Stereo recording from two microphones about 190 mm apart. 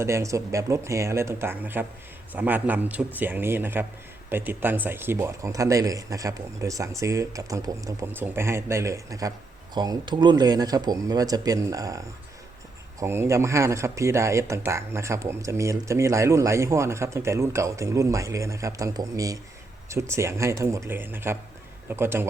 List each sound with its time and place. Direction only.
0.0 s speech: 15° right (ahead or behind)